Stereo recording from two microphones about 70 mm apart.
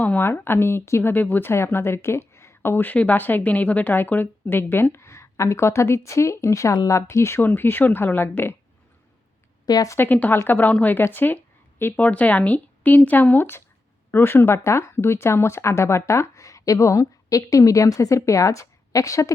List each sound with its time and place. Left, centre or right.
0.2 s a woman's voice: left
1.1 s speech: left
2.6 s a woman's voice: left
7.4 s speech: left
9.6 s a woman's voice: left
10.0 s speech: left